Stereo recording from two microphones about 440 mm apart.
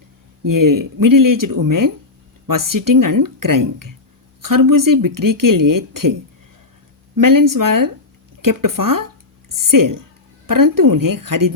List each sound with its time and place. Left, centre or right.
0.4 s speech: right
7.2 s speech: right